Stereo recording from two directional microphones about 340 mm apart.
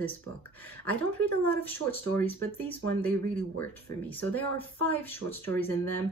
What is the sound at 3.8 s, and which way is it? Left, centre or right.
Speech, centre.